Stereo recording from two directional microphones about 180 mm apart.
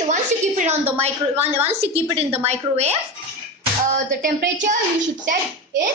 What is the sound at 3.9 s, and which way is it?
Speech, 50° right (ahead or behind).